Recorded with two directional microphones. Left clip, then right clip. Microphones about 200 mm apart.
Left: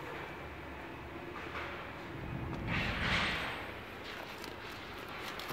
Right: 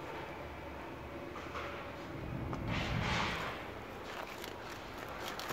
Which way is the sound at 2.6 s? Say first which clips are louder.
Left 3 dB; 50° right (ahead or behind).